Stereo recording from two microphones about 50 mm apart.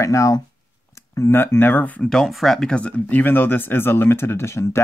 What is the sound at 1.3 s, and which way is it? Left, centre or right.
Speech, left.